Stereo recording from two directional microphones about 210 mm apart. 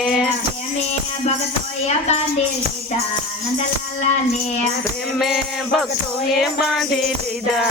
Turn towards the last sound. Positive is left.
turn(degrees=0)  # may be behind; listen again after turning